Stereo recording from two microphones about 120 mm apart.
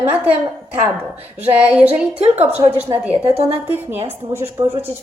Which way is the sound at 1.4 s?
10° right (ahead or behind).